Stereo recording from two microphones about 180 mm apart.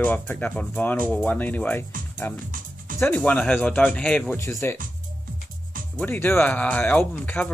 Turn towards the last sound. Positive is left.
turn(degrees=10)  # may be behind; listen again after turning